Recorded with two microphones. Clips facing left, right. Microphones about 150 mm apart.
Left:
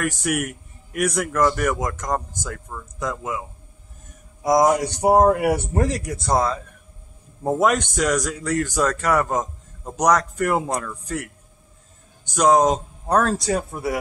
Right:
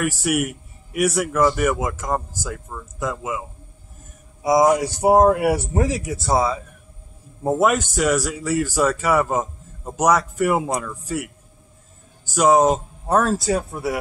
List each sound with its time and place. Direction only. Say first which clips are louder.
0.0 s speech: right 2 dB; 5° right (ahead or behind)